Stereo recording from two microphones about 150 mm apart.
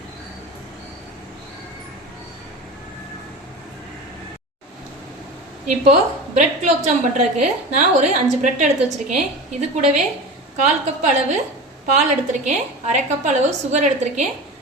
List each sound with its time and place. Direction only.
5.6 s a woman's voice: 50° right (ahead or behind)